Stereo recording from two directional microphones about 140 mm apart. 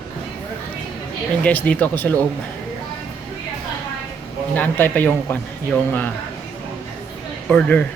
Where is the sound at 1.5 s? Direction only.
10° left (ahead or behind).